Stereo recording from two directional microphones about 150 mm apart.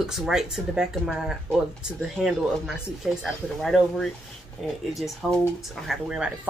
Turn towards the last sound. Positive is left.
turn(degrees=-5)  # may be behind; listen again after turning